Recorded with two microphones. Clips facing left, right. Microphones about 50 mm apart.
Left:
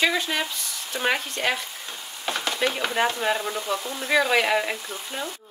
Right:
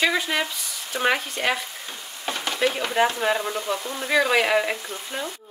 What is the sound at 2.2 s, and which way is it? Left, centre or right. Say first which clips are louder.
Stir: right 1 dB; centre.